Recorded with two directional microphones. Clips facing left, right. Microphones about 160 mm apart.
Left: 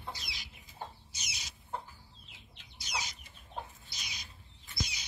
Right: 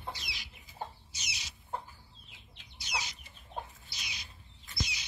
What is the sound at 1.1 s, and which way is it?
Chicken, 45° left (ahead or behind).